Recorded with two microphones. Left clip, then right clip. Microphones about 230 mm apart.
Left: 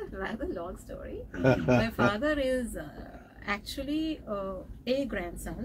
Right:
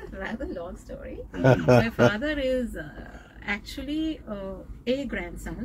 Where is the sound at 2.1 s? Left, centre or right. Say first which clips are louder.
Right 2 dB; centre.